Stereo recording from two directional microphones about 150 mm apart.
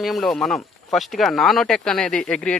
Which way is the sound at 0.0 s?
Centre (ahead or behind).